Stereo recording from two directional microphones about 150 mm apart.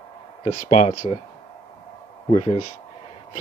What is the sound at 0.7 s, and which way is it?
Speech, 55° left (ahead or behind).